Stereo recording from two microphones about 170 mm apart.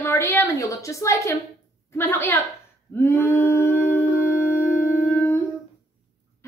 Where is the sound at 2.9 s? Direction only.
15° left (ahead or behind).